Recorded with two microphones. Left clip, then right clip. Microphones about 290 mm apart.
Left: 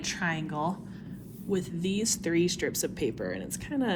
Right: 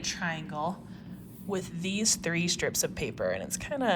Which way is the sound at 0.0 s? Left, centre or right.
Centre.